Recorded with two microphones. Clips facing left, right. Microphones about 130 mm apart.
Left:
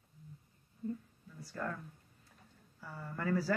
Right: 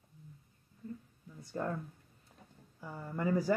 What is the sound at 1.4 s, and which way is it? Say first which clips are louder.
Speech: right 4 dB; 25° right (ahead or behind).